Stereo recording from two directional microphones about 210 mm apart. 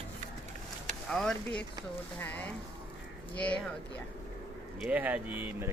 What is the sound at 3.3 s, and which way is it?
Speech, 5° left (ahead or behind).